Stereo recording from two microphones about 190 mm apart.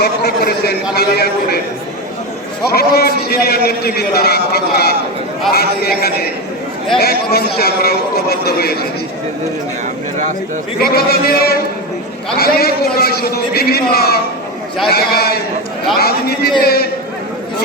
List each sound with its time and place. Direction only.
0.0 s a man's voice: 55° left (ahead or behind)
2.6 s a man's voice: 55° left (ahead or behind)
10.8 s a man's voice: 55° left (ahead or behind)